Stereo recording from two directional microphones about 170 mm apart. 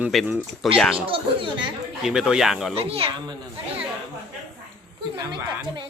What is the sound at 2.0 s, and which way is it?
Speech, 5° right (ahead or behind).